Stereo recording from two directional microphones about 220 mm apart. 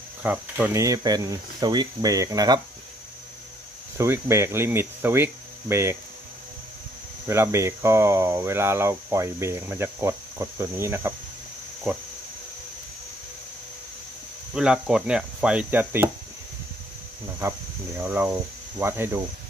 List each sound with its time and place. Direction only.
0.2 s speech: 10° right (ahead or behind)
4.0 s speech: 10° right (ahead or behind)
7.2 s speech: 10° right (ahead or behind)
14.5 s cricket: 5° right (ahead or behind)
18.0 s speech: 10° right (ahead or behind)